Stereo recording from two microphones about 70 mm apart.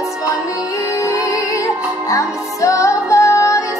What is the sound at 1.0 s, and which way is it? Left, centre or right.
Music, left.